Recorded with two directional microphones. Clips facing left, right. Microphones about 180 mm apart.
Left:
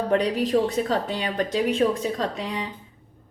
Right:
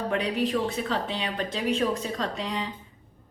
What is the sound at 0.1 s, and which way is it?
A woman's voice, 40° left (ahead or behind).